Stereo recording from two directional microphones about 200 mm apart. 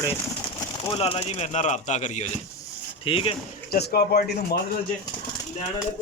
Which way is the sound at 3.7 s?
50° left (ahead or behind).